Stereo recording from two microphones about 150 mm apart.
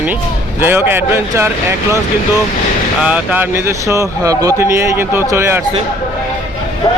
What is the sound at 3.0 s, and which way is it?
Speech, 10° right (ahead or behind).